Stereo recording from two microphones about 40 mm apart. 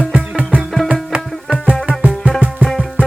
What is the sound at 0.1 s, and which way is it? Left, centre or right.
Music, right.